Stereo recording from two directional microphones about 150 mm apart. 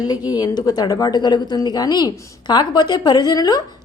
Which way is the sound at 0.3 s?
25° left (ahead or behind).